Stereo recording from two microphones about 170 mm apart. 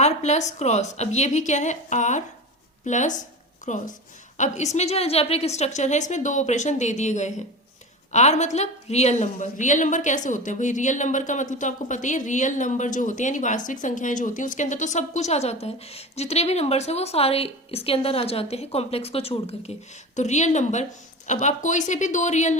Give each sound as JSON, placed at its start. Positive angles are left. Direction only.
{"t": 0.0, "sound": "a woman's voice", "side_deg": 40}